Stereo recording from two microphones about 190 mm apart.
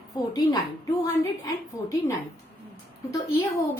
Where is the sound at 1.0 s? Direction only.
15° left (ahead or behind).